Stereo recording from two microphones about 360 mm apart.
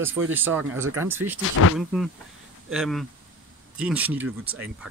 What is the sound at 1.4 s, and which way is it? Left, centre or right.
Speech, left.